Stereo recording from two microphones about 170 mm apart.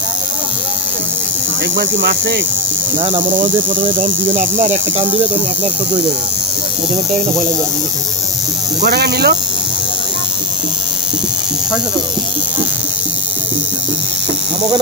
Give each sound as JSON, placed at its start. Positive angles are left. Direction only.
{"t": 1.8, "sound": "hum", "side_deg": -80}
{"t": 3.0, "sound": "speech", "side_deg": -30}
{"t": 8.8, "sound": "speech", "side_deg": -70}